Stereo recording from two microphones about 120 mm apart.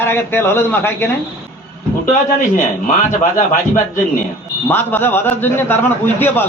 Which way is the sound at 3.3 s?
90° left.